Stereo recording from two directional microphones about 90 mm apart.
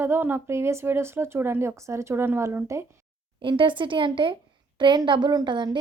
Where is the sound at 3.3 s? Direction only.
70° right (ahead or behind).